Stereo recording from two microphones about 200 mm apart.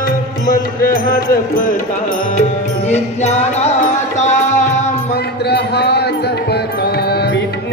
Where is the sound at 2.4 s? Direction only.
35° left (ahead or behind).